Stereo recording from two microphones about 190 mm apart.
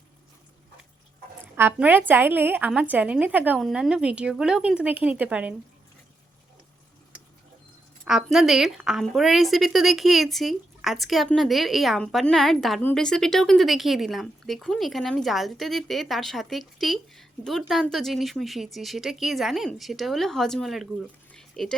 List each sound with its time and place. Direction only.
1.5 s a woman's voice: 10° right (ahead or behind)
8.0 s a woman's voice: centre (ahead or behind)
21.3 s a sound: 5° left (ahead or behind)